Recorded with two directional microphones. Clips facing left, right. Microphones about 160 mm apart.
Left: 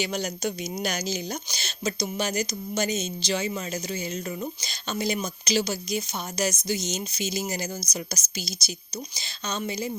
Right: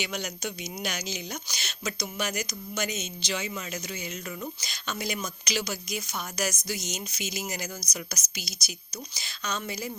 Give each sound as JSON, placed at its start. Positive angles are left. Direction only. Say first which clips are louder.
{"t": 0.0, "sound": "speech", "louder": "left 5 dB", "side_deg": 35}